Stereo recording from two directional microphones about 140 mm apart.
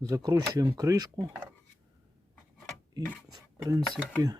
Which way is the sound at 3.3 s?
25° right (ahead or behind).